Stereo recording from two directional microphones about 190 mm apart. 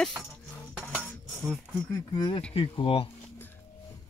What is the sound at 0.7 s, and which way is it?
Cutlery, 5° right (ahead or behind).